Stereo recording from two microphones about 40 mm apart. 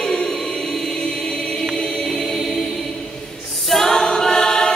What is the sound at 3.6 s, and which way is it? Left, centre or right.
A capella, centre.